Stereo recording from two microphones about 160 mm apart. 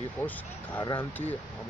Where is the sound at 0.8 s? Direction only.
25° left (ahead or behind).